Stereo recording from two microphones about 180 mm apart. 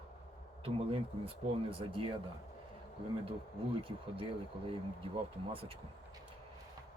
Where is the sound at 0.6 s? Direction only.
30° right (ahead or behind).